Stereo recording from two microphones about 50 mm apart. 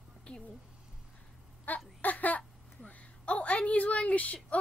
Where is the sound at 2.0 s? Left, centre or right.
Left.